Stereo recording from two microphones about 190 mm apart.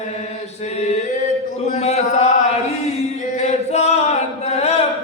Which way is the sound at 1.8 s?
35° left (ahead or behind).